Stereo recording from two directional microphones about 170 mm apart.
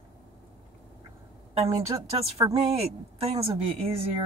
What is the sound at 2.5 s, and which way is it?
Speech, 35° right (ahead or behind).